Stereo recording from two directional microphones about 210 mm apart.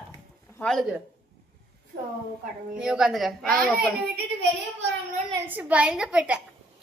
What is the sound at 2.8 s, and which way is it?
A child's voice, 5° right (ahead or behind).